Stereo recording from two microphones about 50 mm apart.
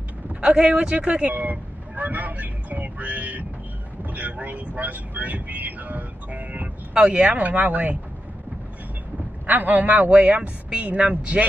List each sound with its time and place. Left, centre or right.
0.4 s speech: right
1.3 s vehicle: right
6.9 s speech: centre
7.3 s speech: right
9.5 s speech: right